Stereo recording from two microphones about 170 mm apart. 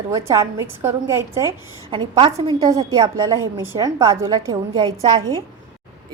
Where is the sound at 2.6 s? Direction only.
20° right (ahead or behind).